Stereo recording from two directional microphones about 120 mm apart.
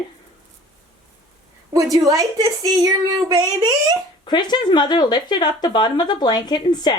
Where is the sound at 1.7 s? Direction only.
30° right (ahead or behind).